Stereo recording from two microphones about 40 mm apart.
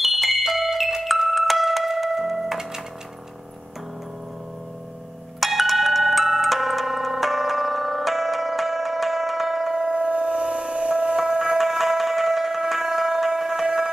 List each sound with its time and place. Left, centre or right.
0.0 s music: centre
5.4 s ringtone: centre
9.8 s a sound: right
11.1 s music: centre
11.6 s music: centre